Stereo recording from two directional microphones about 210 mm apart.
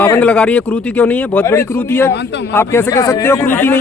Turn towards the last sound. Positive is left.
turn(degrees=10)  # may be behind; listen again after turning